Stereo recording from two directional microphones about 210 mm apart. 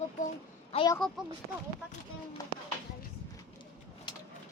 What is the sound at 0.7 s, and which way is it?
Speech, 25° left (ahead or behind).